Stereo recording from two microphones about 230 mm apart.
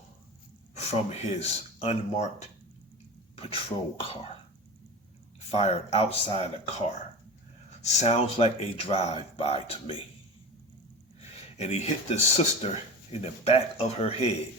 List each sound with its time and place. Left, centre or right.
1.2 s speech: left
5.5 s speech: left
7.8 s speech: left
11.2 s speech: left